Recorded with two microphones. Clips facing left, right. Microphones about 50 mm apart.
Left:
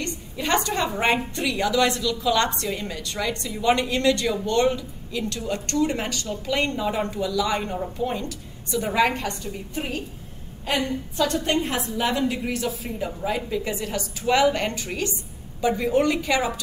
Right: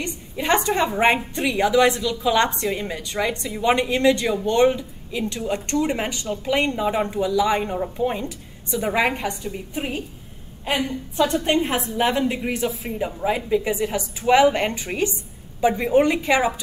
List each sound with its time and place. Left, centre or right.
0.0 s a woman's voice: centre
11.1 s a woman's voice: right